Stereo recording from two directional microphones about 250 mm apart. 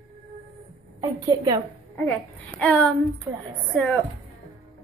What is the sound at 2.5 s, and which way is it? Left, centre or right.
Speech, centre.